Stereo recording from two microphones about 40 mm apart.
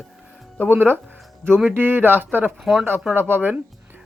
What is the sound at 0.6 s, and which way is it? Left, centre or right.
Speech, right.